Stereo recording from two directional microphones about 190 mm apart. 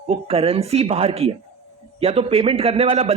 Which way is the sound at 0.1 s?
30° right (ahead or behind).